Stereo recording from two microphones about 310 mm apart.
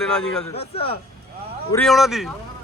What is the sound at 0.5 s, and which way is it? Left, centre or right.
Speech, centre.